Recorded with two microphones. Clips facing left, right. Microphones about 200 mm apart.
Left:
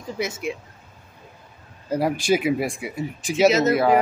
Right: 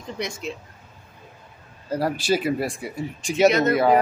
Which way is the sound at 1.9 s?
10° left (ahead or behind).